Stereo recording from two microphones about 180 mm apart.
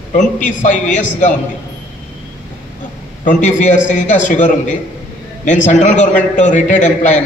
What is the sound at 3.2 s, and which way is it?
A man's voice, 45° left (ahead or behind).